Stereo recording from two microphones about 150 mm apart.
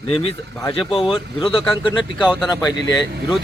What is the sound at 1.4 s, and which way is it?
Speech, 35° left (ahead or behind).